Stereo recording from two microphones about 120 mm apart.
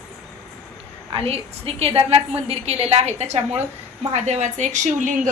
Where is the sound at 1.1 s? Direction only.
55° right (ahead or behind); by 5.3 s 90° right.